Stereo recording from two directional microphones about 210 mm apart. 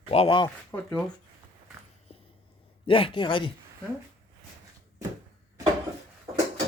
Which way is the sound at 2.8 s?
25° left (ahead or behind).